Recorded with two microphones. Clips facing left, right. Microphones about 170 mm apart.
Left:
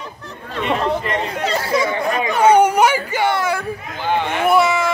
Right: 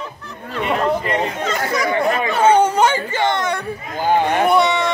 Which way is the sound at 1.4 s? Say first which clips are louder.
Left 1 dB; 30° left (ahead or behind).